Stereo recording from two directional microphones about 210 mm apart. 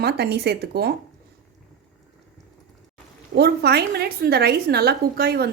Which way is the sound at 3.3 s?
50° right (ahead or behind).